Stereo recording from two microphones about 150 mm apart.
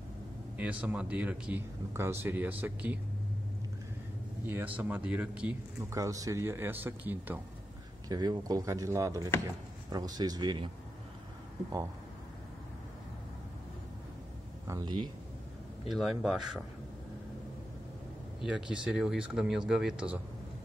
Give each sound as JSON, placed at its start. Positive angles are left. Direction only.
{"t": 0.6, "sound": "speech", "side_deg": -10}
{"t": 4.5, "sound": "speech", "side_deg": -10}
{"t": 5.8, "sound": "speech", "side_deg": -20}
{"t": 8.1, "sound": "speech", "side_deg": -25}
{"t": 14.7, "sound": "speech", "side_deg": -25}
{"t": 15.9, "sound": "speech", "side_deg": 0}
{"t": 18.4, "sound": "speech", "side_deg": -5}